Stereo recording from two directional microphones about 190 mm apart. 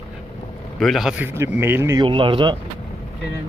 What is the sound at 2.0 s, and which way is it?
Speech, 25° right (ahead or behind).